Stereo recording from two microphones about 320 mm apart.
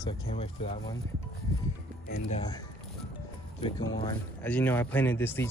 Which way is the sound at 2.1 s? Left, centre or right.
Left.